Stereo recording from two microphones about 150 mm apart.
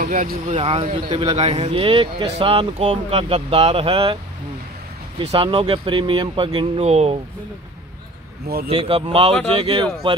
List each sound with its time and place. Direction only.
0.0 s speech: 65° right (ahead or behind)
0.6 s speech: 40° right (ahead or behind)
5.3 s speech: 35° right (ahead or behind)
6.8 s speech: 45° right (ahead or behind)
8.6 s speech: 40° right (ahead or behind)